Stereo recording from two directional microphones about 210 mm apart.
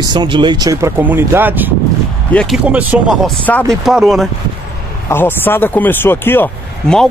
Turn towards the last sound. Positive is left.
turn(degrees=5)  # may be behind; listen again after turning